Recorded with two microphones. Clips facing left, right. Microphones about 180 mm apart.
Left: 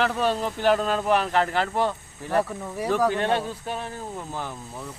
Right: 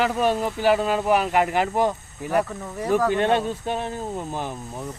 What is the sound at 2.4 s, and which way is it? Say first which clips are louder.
Speech: even; 10° left (ahead or behind).